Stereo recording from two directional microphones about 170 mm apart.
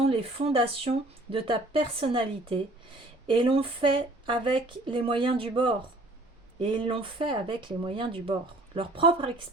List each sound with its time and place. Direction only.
0.0 s speech: 35° right (ahead or behind)